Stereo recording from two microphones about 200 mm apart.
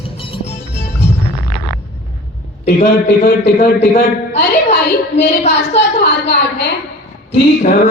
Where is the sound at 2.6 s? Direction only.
35° left (ahead or behind).